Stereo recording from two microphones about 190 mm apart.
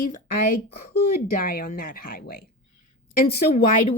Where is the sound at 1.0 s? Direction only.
55° left (ahead or behind).